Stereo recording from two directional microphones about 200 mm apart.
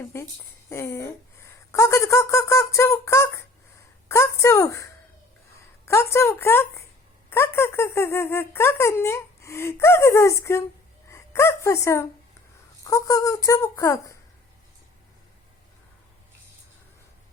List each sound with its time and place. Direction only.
0.0 s a woman's voice: 15° left (ahead or behind)